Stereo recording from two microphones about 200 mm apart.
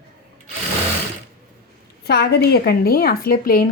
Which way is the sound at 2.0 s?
55° left (ahead or behind).